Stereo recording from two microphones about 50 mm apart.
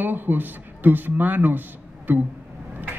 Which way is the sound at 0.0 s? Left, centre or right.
Right.